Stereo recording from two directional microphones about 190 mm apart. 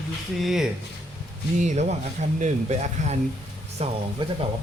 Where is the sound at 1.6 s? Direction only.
40° right (ahead or behind).